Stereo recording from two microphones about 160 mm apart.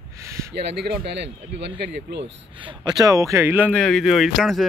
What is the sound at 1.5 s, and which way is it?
Speech, 90° right.